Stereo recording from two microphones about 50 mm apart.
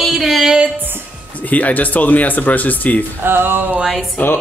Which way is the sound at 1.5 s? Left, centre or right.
Left.